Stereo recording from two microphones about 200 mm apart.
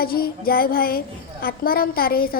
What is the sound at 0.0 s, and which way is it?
A child's voice, 50° left (ahead or behind).